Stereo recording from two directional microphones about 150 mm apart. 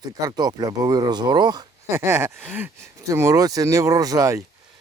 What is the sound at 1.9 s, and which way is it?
Speech, 15° right (ahead or behind).